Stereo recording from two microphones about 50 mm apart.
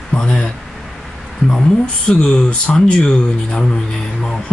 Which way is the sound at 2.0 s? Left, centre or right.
Centre.